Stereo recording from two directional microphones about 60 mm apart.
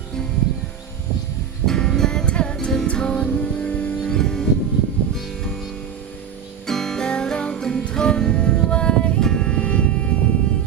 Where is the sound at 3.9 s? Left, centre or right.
Centre.